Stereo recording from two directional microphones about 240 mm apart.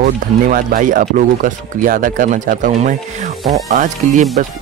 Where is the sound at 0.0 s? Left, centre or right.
Right.